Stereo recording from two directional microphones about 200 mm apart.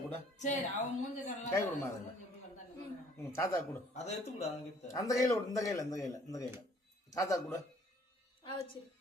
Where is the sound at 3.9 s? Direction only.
35° left (ahead or behind).